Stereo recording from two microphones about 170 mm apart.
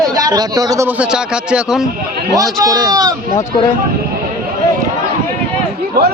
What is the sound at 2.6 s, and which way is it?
Speech, 20° right (ahead or behind).